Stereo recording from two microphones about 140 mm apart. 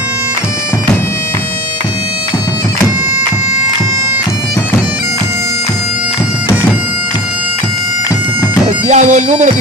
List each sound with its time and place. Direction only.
8.8 s bagpipes: 55° right (ahead or behind)